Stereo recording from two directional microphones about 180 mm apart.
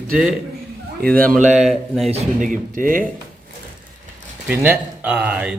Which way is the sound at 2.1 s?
40° right (ahead or behind).